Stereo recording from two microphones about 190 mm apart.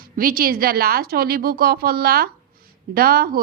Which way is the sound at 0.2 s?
50° right (ahead or behind).